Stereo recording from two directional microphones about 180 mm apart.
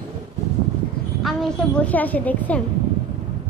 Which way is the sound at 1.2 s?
5° left (ahead or behind).